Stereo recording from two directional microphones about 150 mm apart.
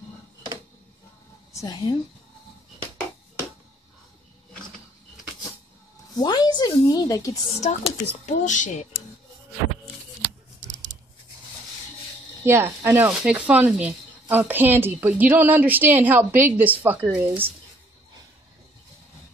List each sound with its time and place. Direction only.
1.5 s a woman's voice: 25° left (ahead or behind)
6.1 s a woman's voice: 25° left (ahead or behind)
7.7 s speech: 45° left (ahead or behind)
10.7 s a sound: 55° right (ahead or behind)
12.4 s a woman's voice: 15° right (ahead or behind)